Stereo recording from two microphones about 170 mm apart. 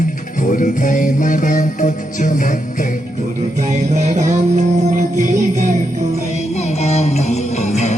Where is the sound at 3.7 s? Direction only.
45° right (ahead or behind).